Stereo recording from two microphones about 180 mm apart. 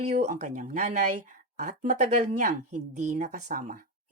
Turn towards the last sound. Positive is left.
turn(degrees=-45)  # may be behind; listen again after turning